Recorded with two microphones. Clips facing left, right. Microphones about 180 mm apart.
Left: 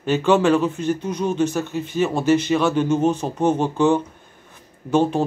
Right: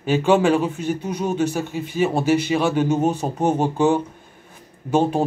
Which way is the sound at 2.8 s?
40° right (ahead or behind).